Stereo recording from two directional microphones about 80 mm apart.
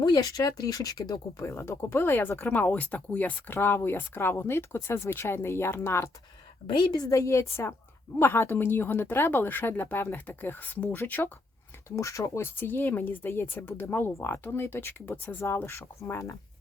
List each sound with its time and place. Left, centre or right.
0.0 s speech: left
6.7 s speech: left
7.1 s speech: left
11.9 s speech: left
15.5 s speech: left